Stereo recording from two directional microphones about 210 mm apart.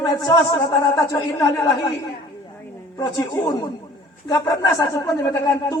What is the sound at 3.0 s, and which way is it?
Speech, 15° left (ahead or behind).